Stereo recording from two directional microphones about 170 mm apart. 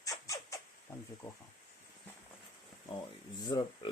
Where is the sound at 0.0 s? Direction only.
20° left (ahead or behind).